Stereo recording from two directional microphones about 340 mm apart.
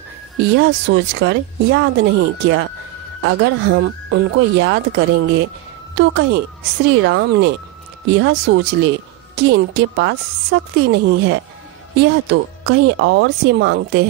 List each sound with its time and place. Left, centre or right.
0.4 s speech: right